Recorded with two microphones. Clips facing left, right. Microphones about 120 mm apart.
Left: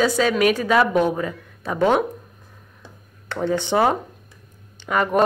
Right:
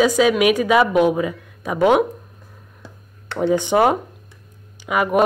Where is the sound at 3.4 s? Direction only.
10° right (ahead or behind).